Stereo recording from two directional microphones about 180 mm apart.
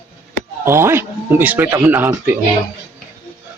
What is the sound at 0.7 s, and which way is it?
Speech, 15° right (ahead or behind).